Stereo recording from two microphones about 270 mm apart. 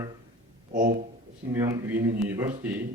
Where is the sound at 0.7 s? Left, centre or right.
Right.